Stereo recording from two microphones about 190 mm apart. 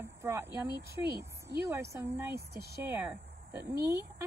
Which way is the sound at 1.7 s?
15° right (ahead or behind).